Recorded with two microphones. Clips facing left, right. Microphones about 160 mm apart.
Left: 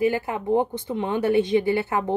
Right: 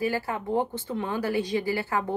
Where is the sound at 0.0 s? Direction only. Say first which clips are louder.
Left 5 dB; 20° left (ahead or behind).